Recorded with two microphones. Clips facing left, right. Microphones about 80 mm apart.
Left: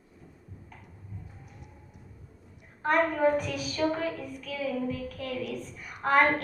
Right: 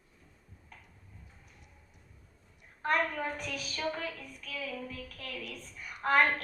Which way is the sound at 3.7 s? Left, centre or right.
Left.